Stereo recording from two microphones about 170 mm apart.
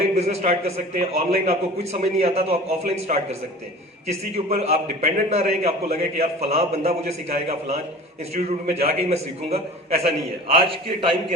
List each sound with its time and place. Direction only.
0.0 s a man's voice: 40° right (ahead or behind)
10.6 s a man's voice: 30° right (ahead or behind)